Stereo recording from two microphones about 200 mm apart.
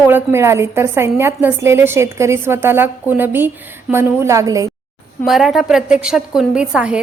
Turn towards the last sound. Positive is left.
turn(degrees=-5)  # may be behind; listen again after turning